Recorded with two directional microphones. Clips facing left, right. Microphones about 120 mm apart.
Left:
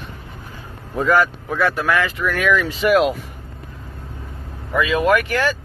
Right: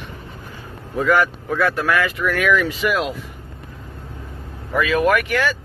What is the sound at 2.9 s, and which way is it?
Speech, 60° left (ahead or behind).